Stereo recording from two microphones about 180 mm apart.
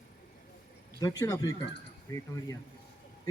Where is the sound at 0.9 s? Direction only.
20° left (ahead or behind).